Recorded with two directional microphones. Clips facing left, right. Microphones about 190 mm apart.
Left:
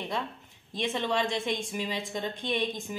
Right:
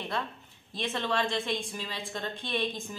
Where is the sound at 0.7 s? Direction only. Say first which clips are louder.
Left 2 dB; 15° left (ahead or behind).